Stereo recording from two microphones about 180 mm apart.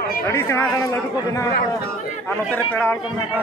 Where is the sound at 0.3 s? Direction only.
10° left (ahead or behind).